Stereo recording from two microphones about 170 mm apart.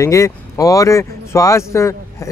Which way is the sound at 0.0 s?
20° left (ahead or behind).